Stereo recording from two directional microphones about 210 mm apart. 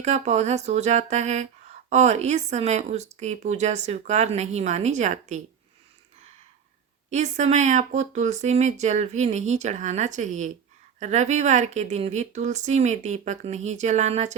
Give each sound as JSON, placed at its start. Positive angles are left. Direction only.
{"t": 0.0, "sound": "speech", "side_deg": -35}
{"t": 7.1, "sound": "speech", "side_deg": -35}